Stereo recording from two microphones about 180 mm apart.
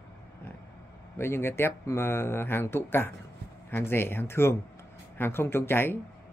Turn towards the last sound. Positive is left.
turn(degrees=10)  # may be behind; listen again after turning